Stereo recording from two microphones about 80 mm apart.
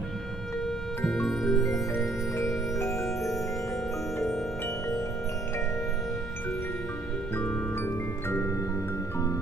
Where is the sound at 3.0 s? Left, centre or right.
Centre.